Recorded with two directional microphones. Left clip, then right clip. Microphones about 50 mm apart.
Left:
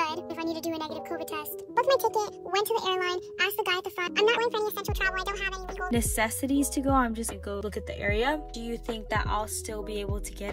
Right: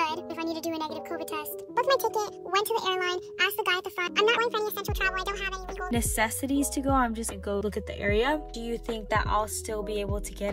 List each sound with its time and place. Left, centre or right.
0.0 s speech: centre
5.9 s a woman's voice: right